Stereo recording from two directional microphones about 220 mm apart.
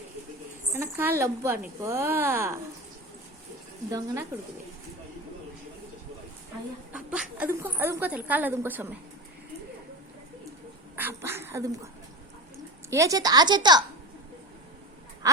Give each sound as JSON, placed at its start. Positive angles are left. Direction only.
{"t": 0.7, "sound": "a woman's voice", "side_deg": -10}
{"t": 3.9, "sound": "a woman's voice", "side_deg": -15}
{"t": 6.9, "sound": "a woman's voice", "side_deg": -5}
{"t": 10.9, "sound": "speech", "side_deg": -10}
{"t": 12.9, "sound": "a woman's voice", "side_deg": -15}